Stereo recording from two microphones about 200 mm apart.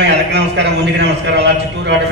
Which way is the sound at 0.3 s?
60° right (ahead or behind).